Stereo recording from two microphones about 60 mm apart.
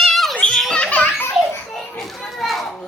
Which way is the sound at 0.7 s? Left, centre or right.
Left.